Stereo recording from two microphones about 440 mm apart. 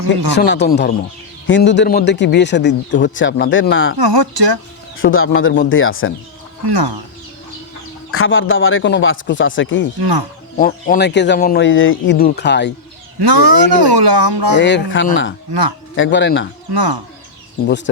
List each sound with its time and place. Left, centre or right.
0.3 s a man's voice: left
3.9 s speech: right
4.9 s a man's voice: left
6.7 s speech: right
8.1 s a man's voice: left
10.0 s speech: right
10.6 s a man's voice: centre
13.1 s speech: right
14.6 s a man's voice: left
16.7 s speech: right